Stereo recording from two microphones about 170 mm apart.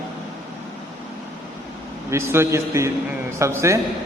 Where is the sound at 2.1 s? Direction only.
15° right (ahead or behind).